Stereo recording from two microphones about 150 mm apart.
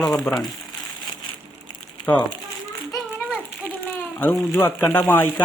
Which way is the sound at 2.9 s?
10° left (ahead or behind).